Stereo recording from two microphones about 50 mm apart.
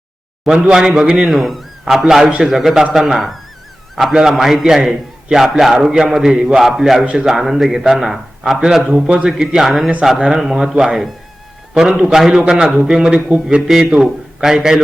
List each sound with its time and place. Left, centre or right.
0.4 s a man's voice: centre
1.3 s a man's voice: centre
7.0 s a man's voice: centre
7.3 s a man's voice: centre
9.0 s speech: right
9.4 s a man's voice: centre
12.5 s a man's voice: centre